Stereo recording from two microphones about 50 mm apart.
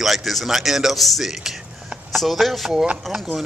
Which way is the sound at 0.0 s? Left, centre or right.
Centre.